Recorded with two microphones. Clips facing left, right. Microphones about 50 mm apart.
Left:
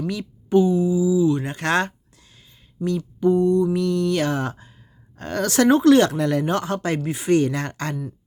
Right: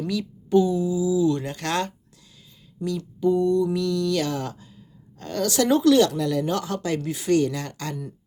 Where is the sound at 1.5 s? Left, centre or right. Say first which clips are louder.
Left 5 dB; left.